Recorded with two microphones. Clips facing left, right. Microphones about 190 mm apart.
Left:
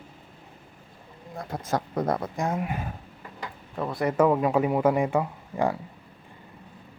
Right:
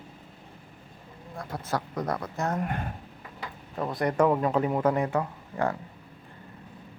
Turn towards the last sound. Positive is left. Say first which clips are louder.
# left 3 dB
turn(degrees=10)  # may be behind; listen again after turning